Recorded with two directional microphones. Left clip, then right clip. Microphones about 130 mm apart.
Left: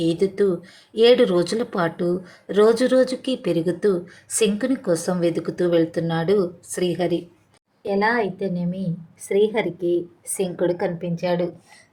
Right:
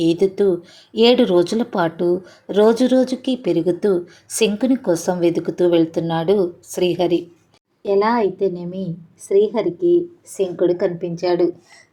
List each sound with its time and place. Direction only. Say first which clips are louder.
0.0 s speech: right 4 dB; 10° right (ahead or behind)
7.8 s speech: right 4 dB; 20° right (ahead or behind)
9.3 s a woman's voice: right 3 dB; 5° left (ahead or behind)
10.6 s a woman's voice: right 5 dB; 5° right (ahead or behind)
11.2 s speech: right 5 dB; 25° right (ahead or behind)